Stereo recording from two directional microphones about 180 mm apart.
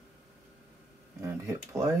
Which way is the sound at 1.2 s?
15° right (ahead or behind).